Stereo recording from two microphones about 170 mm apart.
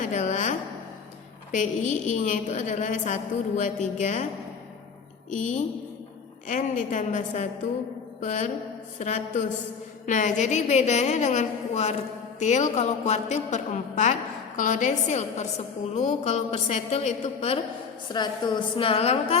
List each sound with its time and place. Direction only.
0.0 s a woman's voice: 45° left (ahead or behind)
1.5 s a woman's voice: 45° left (ahead or behind)
5.3 s a woman's voice: 50° left (ahead or behind)
18.1 s a woman's voice: 25° left (ahead or behind)